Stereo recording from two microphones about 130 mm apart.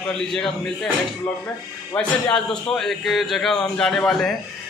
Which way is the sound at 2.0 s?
5° left (ahead or behind).